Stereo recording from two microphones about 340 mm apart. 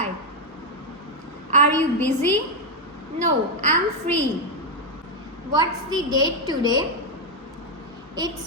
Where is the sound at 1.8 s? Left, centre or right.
Centre.